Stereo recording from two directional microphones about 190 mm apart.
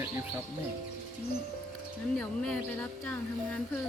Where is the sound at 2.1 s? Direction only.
5° left (ahead or behind).